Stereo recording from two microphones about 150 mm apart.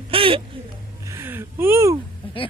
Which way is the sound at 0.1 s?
35° right (ahead or behind).